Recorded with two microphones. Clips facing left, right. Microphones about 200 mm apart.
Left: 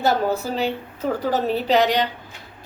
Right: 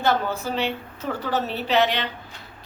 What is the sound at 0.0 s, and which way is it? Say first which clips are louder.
A woman's voice: left 3 dB; 40° left (ahead or behind).